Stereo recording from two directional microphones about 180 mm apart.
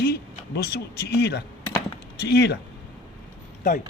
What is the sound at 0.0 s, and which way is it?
Speech, 60° left (ahead or behind).